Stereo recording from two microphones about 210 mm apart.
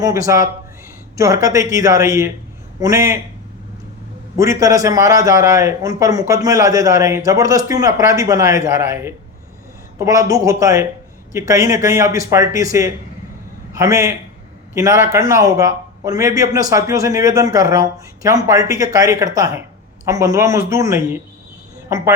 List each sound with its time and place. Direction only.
0.0 s a man's voice: 15° right (ahead or behind)
4.4 s a man's voice: 15° right (ahead or behind)
13.7 s a man's voice: 15° right (ahead or behind)